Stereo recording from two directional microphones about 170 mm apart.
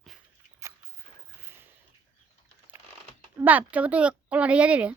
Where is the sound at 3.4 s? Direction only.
10° right (ahead or behind).